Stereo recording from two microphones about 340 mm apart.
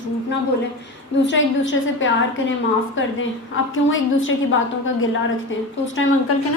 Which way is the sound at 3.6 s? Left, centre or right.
Left.